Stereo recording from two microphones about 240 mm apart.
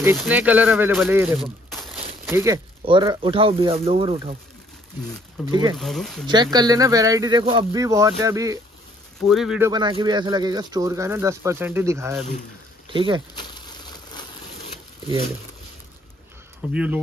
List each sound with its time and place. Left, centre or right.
0.2 s speech: centre
2.3 s speech: centre
5.5 s speech: centre
5.8 s speech: centre
6.2 s speech: centre
9.2 s speech: centre
9.7 s speech: centre
12.9 s speech: right
13.4 s a sound: centre
16.7 s speech: centre